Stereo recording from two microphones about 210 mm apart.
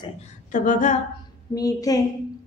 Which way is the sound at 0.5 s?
35° left (ahead or behind).